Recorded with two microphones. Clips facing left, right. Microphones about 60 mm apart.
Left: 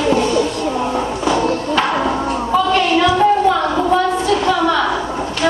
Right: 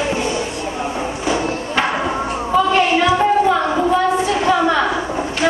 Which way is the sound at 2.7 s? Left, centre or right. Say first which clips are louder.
Left 1 dB; right.